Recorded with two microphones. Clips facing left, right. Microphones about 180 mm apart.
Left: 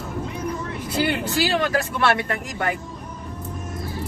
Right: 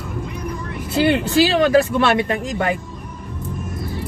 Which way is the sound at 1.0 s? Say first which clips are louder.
Right 7 dB; 25° right (ahead or behind).